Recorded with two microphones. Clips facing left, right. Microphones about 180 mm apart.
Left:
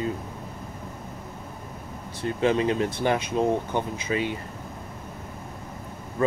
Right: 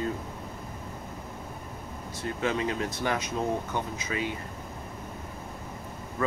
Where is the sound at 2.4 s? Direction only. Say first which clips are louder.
Left 7 dB; 30° left (ahead or behind).